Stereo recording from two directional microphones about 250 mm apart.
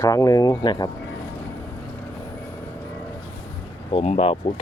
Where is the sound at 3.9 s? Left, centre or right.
Left.